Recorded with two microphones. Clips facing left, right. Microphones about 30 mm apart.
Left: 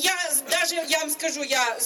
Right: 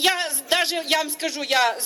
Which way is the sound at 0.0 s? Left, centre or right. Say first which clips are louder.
Right 3 dB; right.